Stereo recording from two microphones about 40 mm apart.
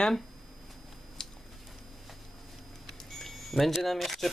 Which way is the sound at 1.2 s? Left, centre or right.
Centre.